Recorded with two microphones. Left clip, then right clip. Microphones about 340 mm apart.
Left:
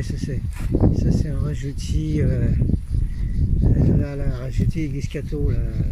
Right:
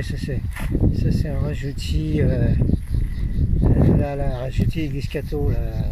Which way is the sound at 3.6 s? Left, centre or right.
Right.